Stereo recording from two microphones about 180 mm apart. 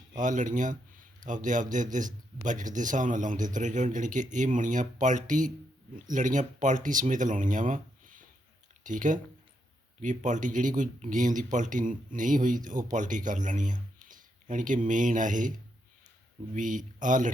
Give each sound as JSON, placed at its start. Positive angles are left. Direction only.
{"t": 0.2, "sound": "speech", "side_deg": -45}
{"t": 16.6, "sound": "speech", "side_deg": -45}